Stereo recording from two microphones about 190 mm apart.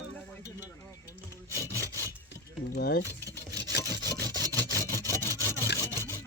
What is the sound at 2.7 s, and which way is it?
Speech, 55° left (ahead or behind).